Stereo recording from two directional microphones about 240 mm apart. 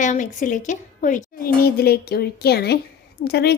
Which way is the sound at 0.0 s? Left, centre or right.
Left.